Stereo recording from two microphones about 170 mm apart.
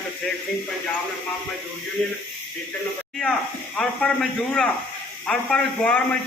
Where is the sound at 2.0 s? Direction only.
5° left (ahead or behind).